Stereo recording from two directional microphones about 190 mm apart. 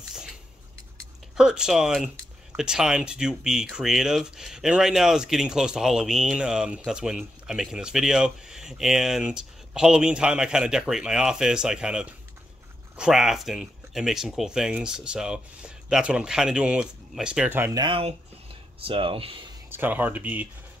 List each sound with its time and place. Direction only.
0.1 s a sound: 5° right (ahead or behind)
1.3 s speech: 5° right (ahead or behind)
17.7 s speech: 25° right (ahead or behind)
19.7 s speech: 10° right (ahead or behind)